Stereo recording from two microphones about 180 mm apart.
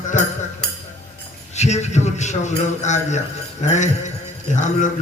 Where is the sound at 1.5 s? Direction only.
40° left (ahead or behind).